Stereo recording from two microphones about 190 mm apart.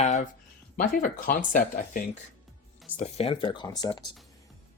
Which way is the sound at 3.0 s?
30° left (ahead or behind).